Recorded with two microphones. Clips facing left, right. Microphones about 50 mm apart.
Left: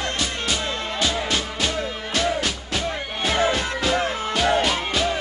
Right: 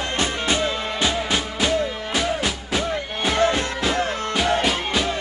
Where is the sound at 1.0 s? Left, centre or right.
Centre.